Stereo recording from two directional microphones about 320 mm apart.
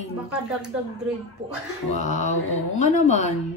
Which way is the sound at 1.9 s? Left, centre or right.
Left.